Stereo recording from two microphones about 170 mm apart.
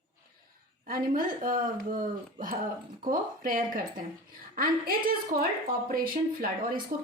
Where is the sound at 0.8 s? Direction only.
55° right (ahead or behind).